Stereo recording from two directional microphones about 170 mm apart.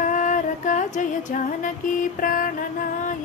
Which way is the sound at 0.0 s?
50° left (ahead or behind).